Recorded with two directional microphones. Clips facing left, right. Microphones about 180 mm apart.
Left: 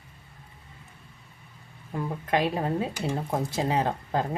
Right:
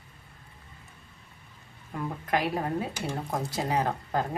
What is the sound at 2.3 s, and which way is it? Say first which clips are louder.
Speech: left 2 dB; 25° left (ahead or behind).